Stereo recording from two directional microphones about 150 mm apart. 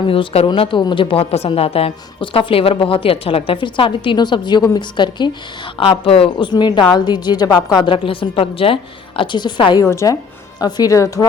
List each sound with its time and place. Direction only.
0.1 s speech: 35° left (ahead or behind)
9.8 s speech: 20° left (ahead or behind)